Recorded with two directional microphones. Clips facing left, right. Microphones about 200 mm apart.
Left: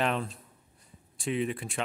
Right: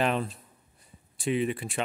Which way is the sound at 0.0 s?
5° right (ahead or behind).